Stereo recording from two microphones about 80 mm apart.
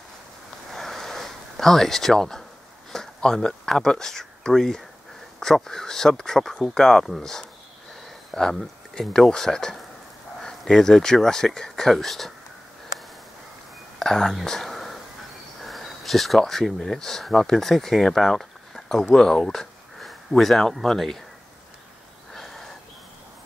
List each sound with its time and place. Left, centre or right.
0.7 s a sound: centre
2.9 s speech: centre
13.9 s whispering: centre
15.6 s speech: centre
22.3 s snort: centre